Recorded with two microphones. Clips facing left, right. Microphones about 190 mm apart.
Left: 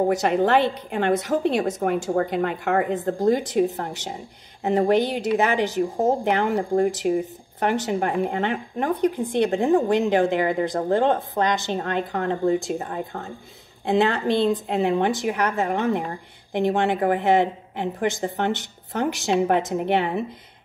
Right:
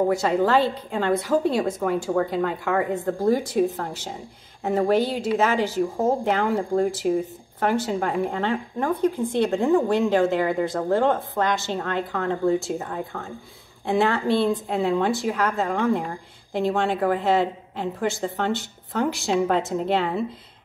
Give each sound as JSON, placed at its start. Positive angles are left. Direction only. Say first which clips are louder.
{"t": 0.1, "sound": "a woman's voice", "louder": "left 1 dB", "side_deg": 20}